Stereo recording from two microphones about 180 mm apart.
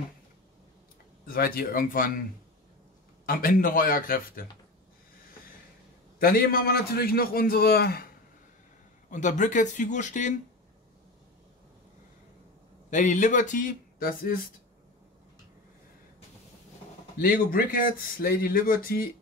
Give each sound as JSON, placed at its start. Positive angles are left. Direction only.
{"t": 1.2, "sound": "speech", "side_deg": 55}
{"t": 3.3, "sound": "speech", "side_deg": 50}
{"t": 6.1, "sound": "a man's voice", "side_deg": 55}
{"t": 9.1, "sound": "speech", "side_deg": 45}
{"t": 12.9, "sound": "speech", "side_deg": 45}
{"t": 17.2, "sound": "speech", "side_deg": 50}